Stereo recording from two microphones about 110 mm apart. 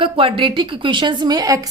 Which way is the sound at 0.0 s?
55° right (ahead or behind).